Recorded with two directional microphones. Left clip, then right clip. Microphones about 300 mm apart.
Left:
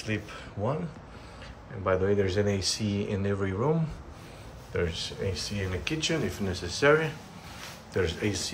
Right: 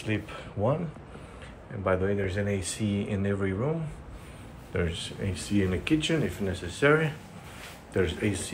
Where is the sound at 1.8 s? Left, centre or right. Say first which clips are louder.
Left 2 dB; centre.